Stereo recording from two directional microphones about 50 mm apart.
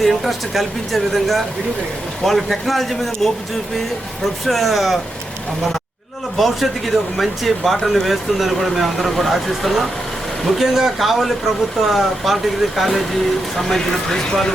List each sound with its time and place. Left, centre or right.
0.0 s speech: centre
4.4 s speech: centre
6.3 s speech: centre